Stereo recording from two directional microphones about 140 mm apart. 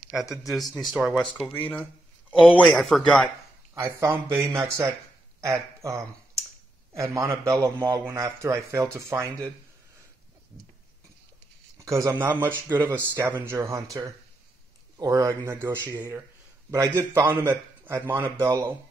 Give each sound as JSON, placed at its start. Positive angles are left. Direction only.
{"t": 0.2, "sound": "speech", "side_deg": 20}
{"t": 0.5, "sound": "speech", "side_deg": 0}
{"t": 1.1, "sound": "speech", "side_deg": 10}
{"t": 2.7, "sound": "speech", "side_deg": 0}
{"t": 3.7, "sound": "a man's voice", "side_deg": -20}
{"t": 11.8, "sound": "a man's voice", "side_deg": -20}